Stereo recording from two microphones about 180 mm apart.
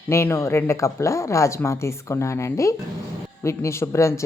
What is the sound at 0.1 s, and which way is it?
Speech, 15° left (ahead or behind).